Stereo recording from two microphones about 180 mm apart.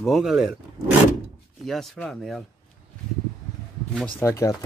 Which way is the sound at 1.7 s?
Centre (ahead or behind).